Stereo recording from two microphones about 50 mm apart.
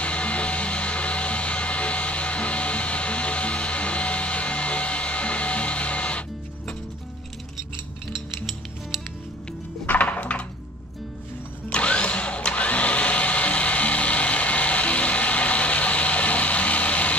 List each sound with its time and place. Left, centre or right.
0.0 s vehicle: left
9.8 s music: left
11.7 s a sound: left